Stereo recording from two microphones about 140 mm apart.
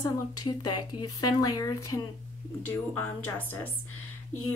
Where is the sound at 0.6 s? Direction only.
30° left (ahead or behind).